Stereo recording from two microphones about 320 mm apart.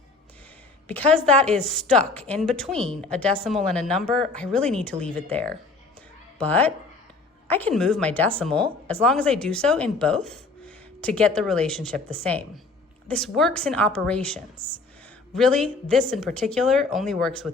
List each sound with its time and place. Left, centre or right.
0.9 s speech: centre